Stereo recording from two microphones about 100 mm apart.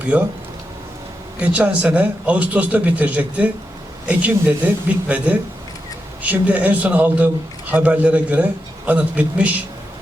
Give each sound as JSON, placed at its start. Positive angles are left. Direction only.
{"t": 0.0, "sound": "speech", "side_deg": -15}
{"t": 1.4, "sound": "a man's voice", "side_deg": -15}